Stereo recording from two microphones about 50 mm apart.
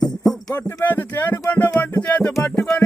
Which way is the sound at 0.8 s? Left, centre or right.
Left.